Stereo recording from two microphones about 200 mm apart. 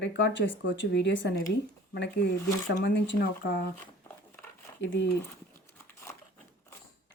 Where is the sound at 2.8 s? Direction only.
65° left (ahead or behind).